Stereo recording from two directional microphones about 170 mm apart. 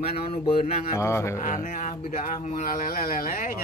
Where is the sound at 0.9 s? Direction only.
15° left (ahead or behind).